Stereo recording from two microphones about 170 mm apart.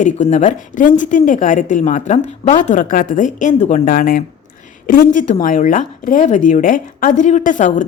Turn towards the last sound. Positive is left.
turn(degrees=50)  # may be behind; listen again after turning